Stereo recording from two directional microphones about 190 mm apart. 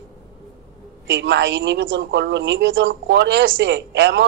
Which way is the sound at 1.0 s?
70° right (ahead or behind).